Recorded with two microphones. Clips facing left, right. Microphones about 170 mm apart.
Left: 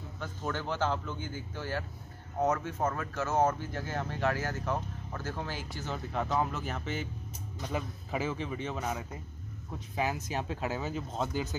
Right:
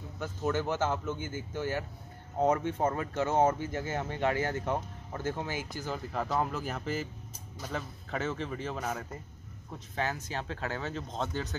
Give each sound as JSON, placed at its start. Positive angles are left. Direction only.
{"t": 0.2, "sound": "a man's voice", "side_deg": -10}
{"t": 5.5, "sound": "a man's voice", "side_deg": -15}
{"t": 5.9, "sound": "speech", "side_deg": 0}
{"t": 10.2, "sound": "speech", "side_deg": 15}